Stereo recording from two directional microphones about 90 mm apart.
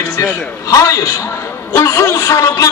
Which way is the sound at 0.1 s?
40° left (ahead or behind).